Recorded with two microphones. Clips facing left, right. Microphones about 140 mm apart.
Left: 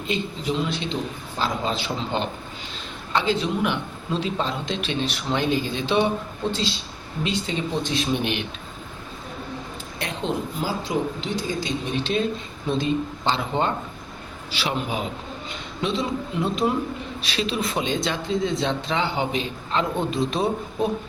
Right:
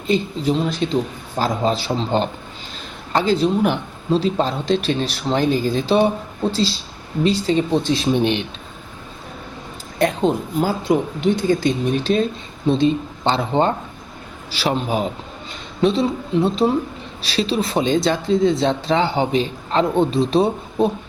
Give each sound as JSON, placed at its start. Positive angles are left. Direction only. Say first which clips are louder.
{"t": 0.1, "sound": "speech", "louder": "right 8 dB", "side_deg": -40}
{"t": 10.0, "sound": "speech", "louder": "right 9 dB", "side_deg": -50}
{"t": 12.6, "sound": "speech", "louder": "right 6 dB", "side_deg": -30}